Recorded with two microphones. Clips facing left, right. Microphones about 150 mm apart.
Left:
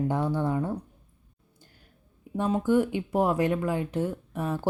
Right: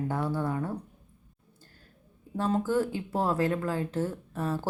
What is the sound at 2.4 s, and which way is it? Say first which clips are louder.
Speech: left 3 dB; 15° left (ahead or behind).